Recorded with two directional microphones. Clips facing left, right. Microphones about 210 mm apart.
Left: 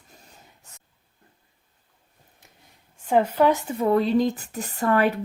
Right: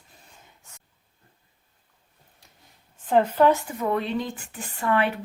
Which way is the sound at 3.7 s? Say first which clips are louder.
Left 6 dB; 35° left (ahead or behind).